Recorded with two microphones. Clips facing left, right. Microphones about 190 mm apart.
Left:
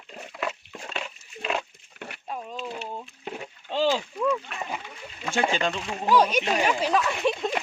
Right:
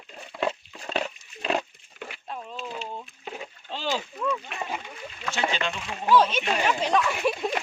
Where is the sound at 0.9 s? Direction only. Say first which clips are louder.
Right 8 dB; 35° right (ahead or behind).